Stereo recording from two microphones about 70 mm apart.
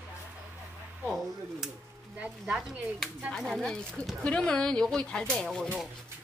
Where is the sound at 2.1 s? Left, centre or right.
Centre.